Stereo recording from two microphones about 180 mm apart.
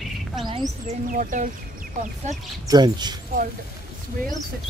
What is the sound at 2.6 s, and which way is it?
Speech, 20° right (ahead or behind).